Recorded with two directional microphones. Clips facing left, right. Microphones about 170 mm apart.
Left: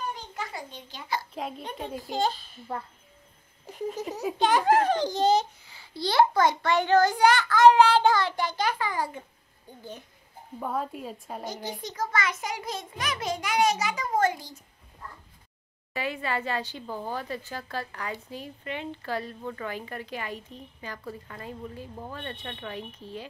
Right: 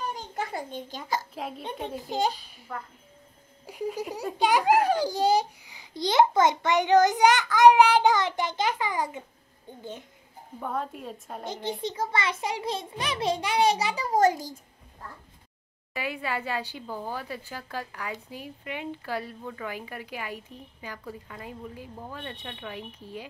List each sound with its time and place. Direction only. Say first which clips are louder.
0.3 s a child's voice: right 4 dB; 50° right (ahead or behind)
2.0 s a child's voice: even; 15° right (ahead or behind)
3.6 s a child's voice: right 1 dB; 10° right (ahead or behind)
10.6 s a woman's voice: left 1 dB; centre (ahead or behind)
11.4 s a child's voice: right 5 dB; 25° right (ahead or behind); by 14.6 s 40° right (ahead or behind)
15.9 s a child's voice: left 1 dB; 10° right (ahead or behind)